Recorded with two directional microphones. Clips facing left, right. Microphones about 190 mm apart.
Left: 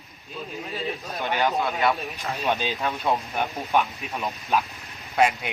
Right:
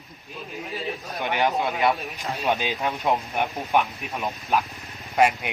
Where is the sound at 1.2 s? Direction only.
15° right (ahead or behind).